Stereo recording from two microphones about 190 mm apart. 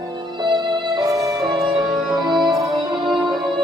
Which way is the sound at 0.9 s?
20° right (ahead or behind).